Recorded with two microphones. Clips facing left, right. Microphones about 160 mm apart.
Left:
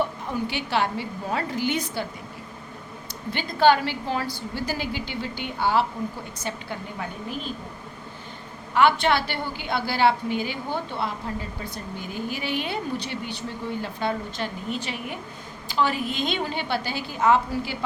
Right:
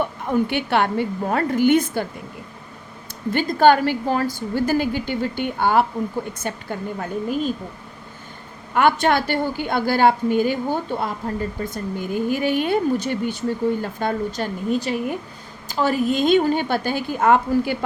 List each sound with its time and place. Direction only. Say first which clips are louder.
0.0 s a woman's voice: right 5 dB; 55° right (ahead or behind)
3.3 s a woman's voice: right 4 dB; 50° right (ahead or behind)
8.7 s a woman's voice: right 3 dB; 50° right (ahead or behind)